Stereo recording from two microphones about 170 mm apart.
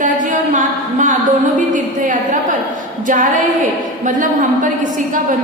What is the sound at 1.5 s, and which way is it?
A woman's voice, 50° right (ahead or behind).